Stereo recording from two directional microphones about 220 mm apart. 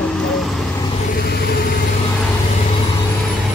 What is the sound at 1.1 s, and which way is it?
Speech, 45° left (ahead or behind).